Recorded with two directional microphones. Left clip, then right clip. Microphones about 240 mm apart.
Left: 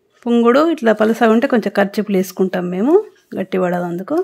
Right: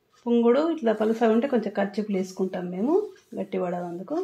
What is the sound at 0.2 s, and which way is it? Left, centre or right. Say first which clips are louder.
Speech: left 9 dB; left.